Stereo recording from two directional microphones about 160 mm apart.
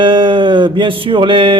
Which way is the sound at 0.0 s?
30° right (ahead or behind).